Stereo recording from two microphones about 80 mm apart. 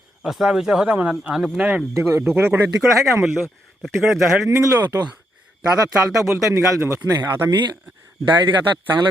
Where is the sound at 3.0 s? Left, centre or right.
Centre.